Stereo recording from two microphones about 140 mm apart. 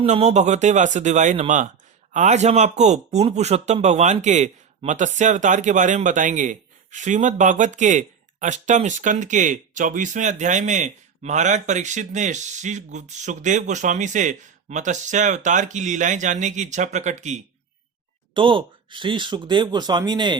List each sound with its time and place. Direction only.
0.0 s speech: 50° right (ahead or behind)
18.3 s speech: 35° right (ahead or behind)